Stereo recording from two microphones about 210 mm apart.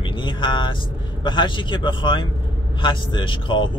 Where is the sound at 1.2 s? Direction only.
20° left (ahead or behind).